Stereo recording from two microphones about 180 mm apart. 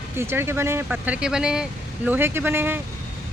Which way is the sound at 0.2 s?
15° right (ahead or behind).